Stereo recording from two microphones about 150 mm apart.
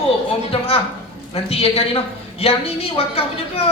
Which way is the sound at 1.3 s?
40° left (ahead or behind).